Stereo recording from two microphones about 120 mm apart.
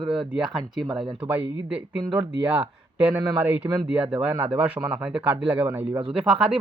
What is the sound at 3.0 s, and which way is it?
Speech, 15° right (ahead or behind).